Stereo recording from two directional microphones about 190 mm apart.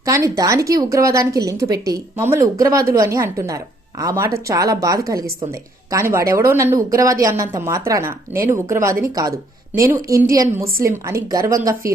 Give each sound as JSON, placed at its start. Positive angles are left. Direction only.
{"t": 0.0, "sound": "speech", "side_deg": -15}